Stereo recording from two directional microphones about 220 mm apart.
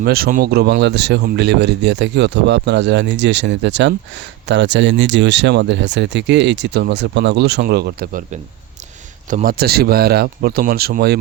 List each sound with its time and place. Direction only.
0.0 s speech: 45° right (ahead or behind)